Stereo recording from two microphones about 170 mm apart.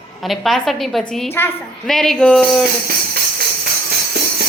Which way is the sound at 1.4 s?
15° left (ahead or behind).